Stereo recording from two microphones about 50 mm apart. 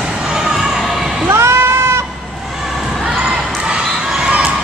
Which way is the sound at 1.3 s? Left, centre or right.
Right.